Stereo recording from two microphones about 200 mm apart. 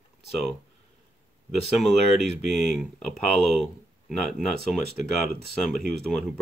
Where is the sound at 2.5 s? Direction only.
Centre (ahead or behind).